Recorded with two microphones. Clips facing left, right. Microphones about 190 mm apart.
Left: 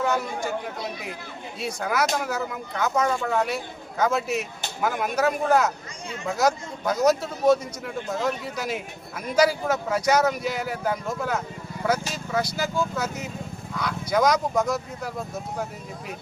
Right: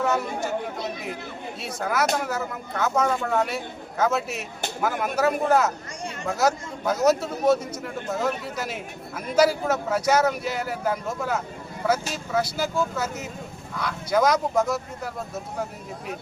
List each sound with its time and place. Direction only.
0.0 s a man's voice: 5° right (ahead or behind)
1.6 s a man's voice: centre (ahead or behind)